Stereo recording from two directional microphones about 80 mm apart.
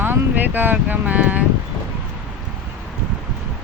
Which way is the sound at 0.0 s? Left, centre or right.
Right.